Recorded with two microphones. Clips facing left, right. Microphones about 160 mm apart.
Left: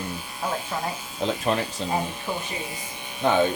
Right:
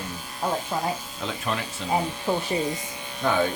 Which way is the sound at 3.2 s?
20° left (ahead or behind).